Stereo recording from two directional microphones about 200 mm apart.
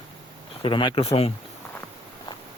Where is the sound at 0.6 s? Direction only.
25° left (ahead or behind).